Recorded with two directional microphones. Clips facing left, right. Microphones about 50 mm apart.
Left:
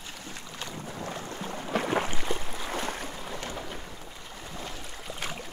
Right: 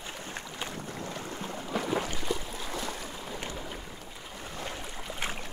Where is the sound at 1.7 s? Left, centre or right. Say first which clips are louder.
Left 3 dB; left.